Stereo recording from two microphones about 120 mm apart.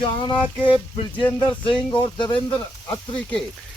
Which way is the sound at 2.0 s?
40° left (ahead or behind).